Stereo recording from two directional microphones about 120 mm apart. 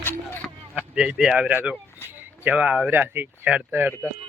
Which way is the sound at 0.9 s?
10° right (ahead or behind).